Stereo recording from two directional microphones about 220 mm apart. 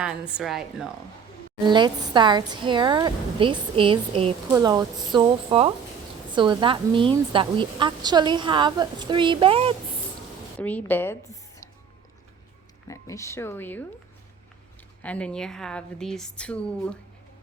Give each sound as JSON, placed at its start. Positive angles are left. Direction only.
{"t": 0.0, "sound": "a woman's voice", "side_deg": -5}
{"t": 1.6, "sound": "a woman's voice", "side_deg": -20}
{"t": 10.6, "sound": "a woman's voice", "side_deg": 5}
{"t": 12.9, "sound": "speech", "side_deg": 15}
{"t": 15.0, "sound": "a woman's voice", "side_deg": 5}